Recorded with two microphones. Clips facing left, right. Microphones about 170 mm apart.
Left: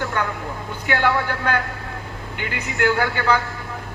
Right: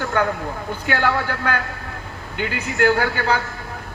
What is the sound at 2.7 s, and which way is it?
Speech, 50° right (ahead or behind).